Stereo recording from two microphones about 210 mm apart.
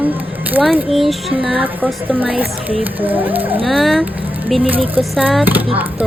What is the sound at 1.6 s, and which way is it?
A woman's voice, 10° right (ahead or behind).